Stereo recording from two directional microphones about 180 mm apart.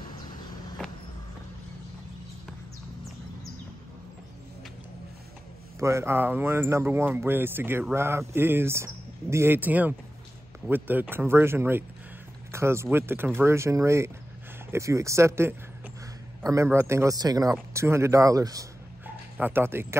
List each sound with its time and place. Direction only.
5.8 s speech: 15° right (ahead or behind)
12.4 s a sound: 15° right (ahead or behind)
12.9 s speech: 10° right (ahead or behind)